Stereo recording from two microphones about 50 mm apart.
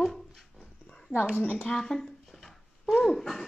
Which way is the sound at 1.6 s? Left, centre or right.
Centre.